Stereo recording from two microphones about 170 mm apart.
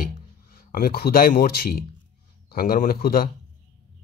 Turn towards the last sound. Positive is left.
turn(degrees=60)  # may be behind; listen again after turning